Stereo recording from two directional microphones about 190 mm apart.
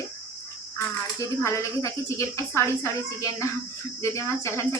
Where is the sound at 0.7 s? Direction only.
15° left (ahead or behind).